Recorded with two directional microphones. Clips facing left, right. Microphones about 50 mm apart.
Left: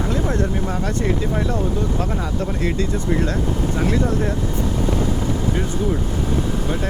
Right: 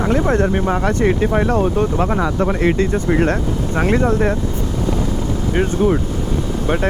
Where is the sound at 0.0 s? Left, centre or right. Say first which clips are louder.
Right 6 dB; right.